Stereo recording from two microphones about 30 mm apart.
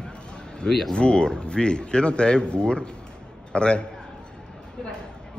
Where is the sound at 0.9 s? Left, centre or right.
Left.